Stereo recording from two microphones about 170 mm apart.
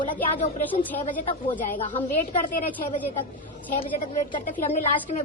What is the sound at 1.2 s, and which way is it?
Speech, 30° left (ahead or behind).